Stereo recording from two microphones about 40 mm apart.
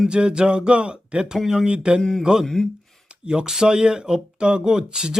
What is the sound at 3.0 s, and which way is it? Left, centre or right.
Speech, centre.